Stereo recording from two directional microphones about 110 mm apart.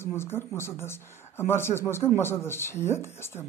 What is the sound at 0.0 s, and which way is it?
A woman's voice, 20° left (ahead or behind).